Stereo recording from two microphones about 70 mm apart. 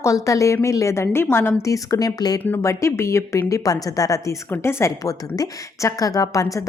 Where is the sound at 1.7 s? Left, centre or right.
Left.